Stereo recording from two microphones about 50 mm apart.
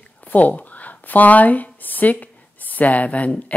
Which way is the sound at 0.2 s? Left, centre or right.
Left.